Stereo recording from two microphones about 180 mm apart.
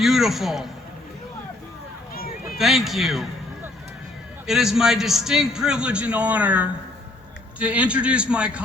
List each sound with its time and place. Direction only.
0.0 s a man's voice: centre (ahead or behind)
2.1 s a sound: 55° left (ahead or behind)
2.6 s a man's voice: centre (ahead or behind)
4.4 s a man's voice: centre (ahead or behind)